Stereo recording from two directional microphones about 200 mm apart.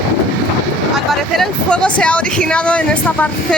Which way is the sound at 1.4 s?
5° left (ahead or behind).